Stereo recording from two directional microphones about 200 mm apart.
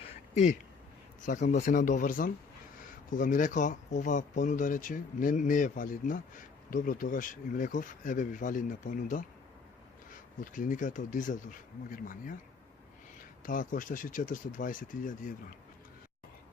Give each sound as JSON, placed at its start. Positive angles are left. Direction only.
{"t": 1.2, "sound": "speech", "side_deg": 40}
{"t": 10.4, "sound": "speech", "side_deg": 40}
{"t": 13.4, "sound": "speech", "side_deg": 45}